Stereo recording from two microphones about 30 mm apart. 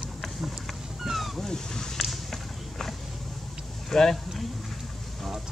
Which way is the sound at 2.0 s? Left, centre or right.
Centre.